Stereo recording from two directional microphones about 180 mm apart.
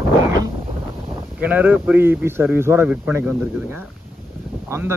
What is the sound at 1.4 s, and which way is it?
A man's voice, 10° right (ahead or behind).